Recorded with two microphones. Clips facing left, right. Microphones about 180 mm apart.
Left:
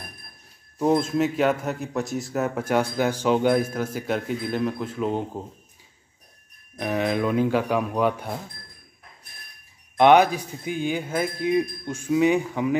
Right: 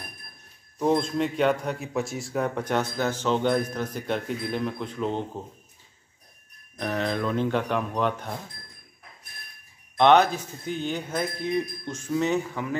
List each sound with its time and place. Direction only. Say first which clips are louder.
0.7 s speech: left 2 dB; 5° left (ahead or behind)
6.8 s speech: left 3 dB; 15° left (ahead or behind)
9.9 s speech: left 3 dB; 10° left (ahead or behind)